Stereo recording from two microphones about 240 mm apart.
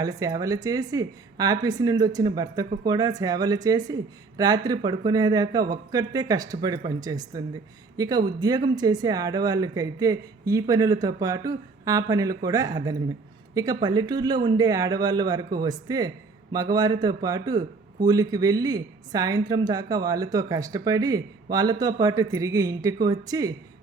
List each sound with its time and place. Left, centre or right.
0.0 s a man's voice: centre